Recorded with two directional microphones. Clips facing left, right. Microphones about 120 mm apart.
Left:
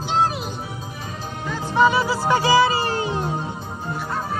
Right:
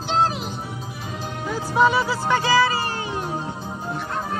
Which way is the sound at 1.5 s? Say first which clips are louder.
Left 1 dB; 5° right (ahead or behind).